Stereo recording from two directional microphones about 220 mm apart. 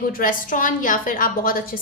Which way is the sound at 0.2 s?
40° left (ahead or behind).